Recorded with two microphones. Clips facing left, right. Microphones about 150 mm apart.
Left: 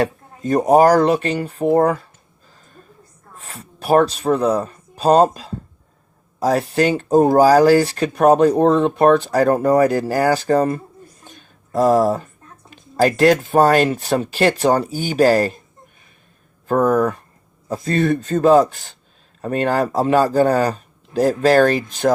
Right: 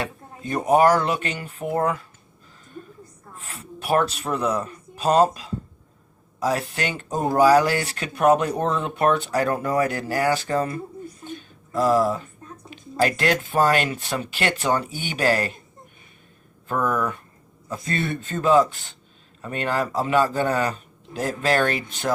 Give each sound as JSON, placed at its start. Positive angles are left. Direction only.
{"t": 0.0, "sound": "speech", "side_deg": 40}
{"t": 3.4, "sound": "speech", "side_deg": 35}
{"t": 16.6, "sound": "speech", "side_deg": 40}